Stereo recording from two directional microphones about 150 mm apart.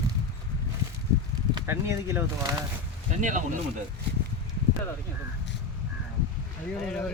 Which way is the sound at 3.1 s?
60° right (ahead or behind).